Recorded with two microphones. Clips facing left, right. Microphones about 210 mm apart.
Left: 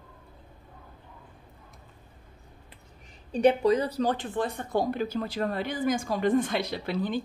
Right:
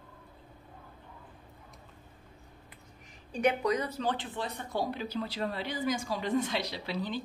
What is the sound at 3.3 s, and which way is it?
A woman's voice, 30° left (ahead or behind).